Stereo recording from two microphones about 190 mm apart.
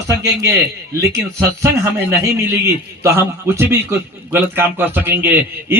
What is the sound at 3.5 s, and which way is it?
A man's voice, 15° right (ahead or behind).